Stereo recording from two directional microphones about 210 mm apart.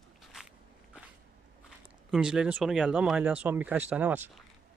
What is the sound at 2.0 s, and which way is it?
Speech, 5° right (ahead or behind).